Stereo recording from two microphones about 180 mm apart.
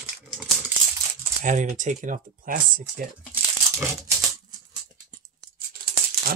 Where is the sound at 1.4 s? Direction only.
45° right (ahead or behind).